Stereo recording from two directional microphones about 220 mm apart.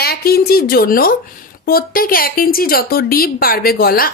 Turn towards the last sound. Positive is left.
turn(degrees=45)  # may be behind; listen again after turning